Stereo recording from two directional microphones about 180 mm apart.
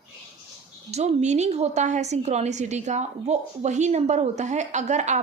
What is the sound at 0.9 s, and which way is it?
A woman's voice, 35° right (ahead or behind).